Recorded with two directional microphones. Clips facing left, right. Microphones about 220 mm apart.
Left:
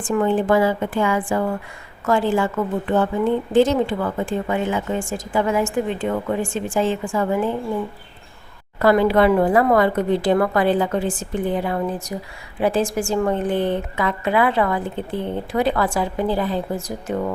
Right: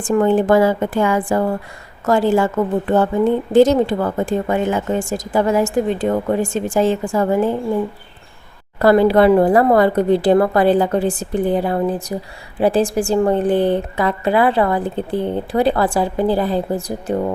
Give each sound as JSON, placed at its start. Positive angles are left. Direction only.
{"t": 0.1, "sound": "a woman's voice", "side_deg": -45}
{"t": 8.8, "sound": "a woman's voice", "side_deg": -35}